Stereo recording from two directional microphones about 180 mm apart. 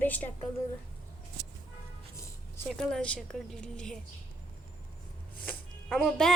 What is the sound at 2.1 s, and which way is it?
Music, 15° left (ahead or behind).